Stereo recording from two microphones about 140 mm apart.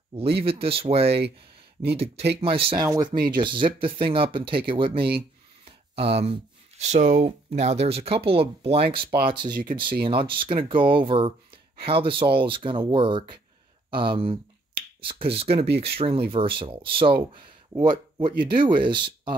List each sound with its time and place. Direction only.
0.1 s speech: 40° right (ahead or behind)
2.8 s speech: 25° right (ahead or behind)
9.5 s speech: 85° right
10.0 s speech: 40° right (ahead or behind)